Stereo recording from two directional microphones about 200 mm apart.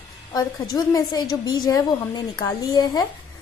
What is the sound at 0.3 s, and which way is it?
A woman's voice, 20° left (ahead or behind).